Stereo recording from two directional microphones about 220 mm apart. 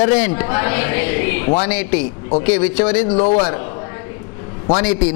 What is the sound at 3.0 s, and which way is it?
A man's voice, 30° left (ahead or behind).